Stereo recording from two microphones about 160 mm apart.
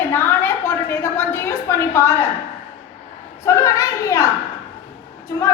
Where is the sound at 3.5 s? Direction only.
20° left (ahead or behind).